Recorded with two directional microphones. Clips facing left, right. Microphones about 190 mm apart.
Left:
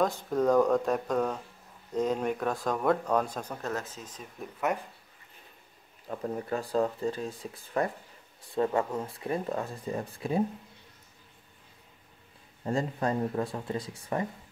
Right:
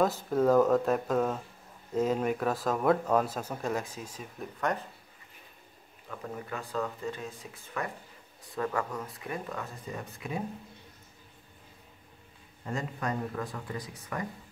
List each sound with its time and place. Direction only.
0.0 s speech: 5° right (ahead or behind)
4.4 s speech: 5° left (ahead or behind)
6.0 s speech: 35° left (ahead or behind)
12.6 s speech: 30° left (ahead or behind)